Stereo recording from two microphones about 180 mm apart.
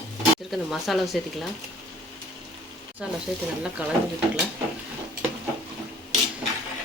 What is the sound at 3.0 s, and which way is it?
Speech, 5° right (ahead or behind).